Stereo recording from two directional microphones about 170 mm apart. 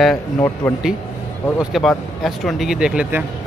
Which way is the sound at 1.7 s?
Centre (ahead or behind).